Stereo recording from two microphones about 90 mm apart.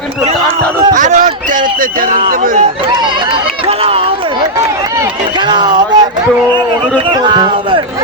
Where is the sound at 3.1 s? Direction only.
75° right (ahead or behind).